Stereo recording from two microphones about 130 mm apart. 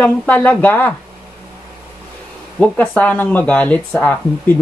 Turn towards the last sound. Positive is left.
turn(degrees=15)  # may be behind; listen again after turning